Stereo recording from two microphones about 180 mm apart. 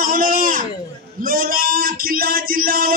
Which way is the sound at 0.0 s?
50° right (ahead or behind).